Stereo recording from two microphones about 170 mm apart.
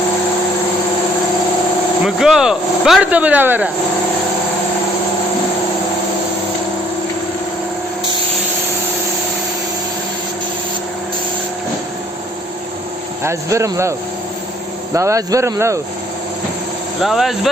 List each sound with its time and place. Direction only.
2.0 s speech: 5° right (ahead or behind)
13.2 s speech: 15° right (ahead or behind)
14.9 s speech: 20° right (ahead or behind)
17.0 s speech: centre (ahead or behind)